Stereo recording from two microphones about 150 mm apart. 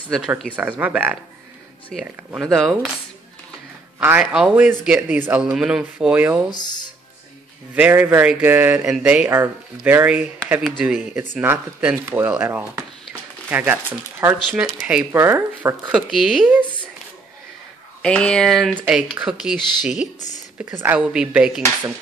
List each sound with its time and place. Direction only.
0.5 s speech: 10° right (ahead or behind)
1.9 s speech: centre (ahead or behind)
4.0 s speech: 10° right (ahead or behind)
6.5 s speech: 30° left (ahead or behind)
7.7 s speech: 10° right (ahead or behind)
18.0 s speech: 5° left (ahead or behind)
20.2 s speech: 55° left (ahead or behind)
20.7 s speech: 15° right (ahead or behind)